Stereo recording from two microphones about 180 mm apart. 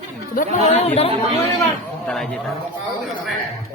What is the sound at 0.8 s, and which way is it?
Speech, 35° left (ahead or behind).